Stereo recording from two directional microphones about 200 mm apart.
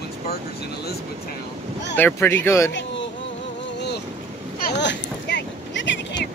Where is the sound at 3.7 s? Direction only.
55° left (ahead or behind).